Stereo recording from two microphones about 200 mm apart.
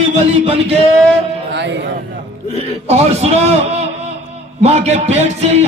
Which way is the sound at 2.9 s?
30° right (ahead or behind).